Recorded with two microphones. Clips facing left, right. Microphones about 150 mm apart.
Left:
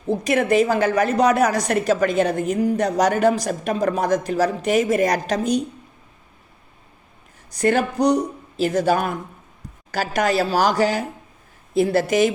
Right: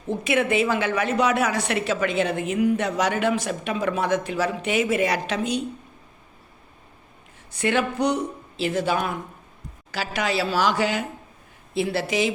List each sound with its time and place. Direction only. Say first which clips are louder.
0.1 s a woman's voice: left 4 dB; 40° left (ahead or behind)
7.5 s a woman's voice: left 4 dB; 40° left (ahead or behind)